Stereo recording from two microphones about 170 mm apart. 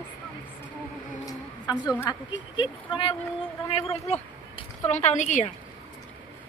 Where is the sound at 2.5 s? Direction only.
30° left (ahead or behind); by 5.5 s 45° left (ahead or behind).